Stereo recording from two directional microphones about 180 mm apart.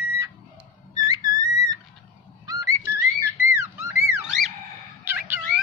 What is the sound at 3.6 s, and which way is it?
Music, 15° right (ahead or behind).